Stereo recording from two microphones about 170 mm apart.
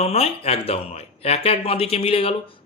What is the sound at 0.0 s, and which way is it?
Speech, 35° left (ahead or behind).